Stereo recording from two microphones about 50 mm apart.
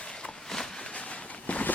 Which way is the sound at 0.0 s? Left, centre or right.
Centre.